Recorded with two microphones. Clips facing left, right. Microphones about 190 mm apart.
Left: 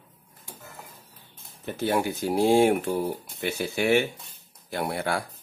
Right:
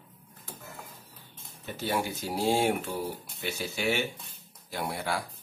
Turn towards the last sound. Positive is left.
turn(degrees=55)  # may be behind; listen again after turning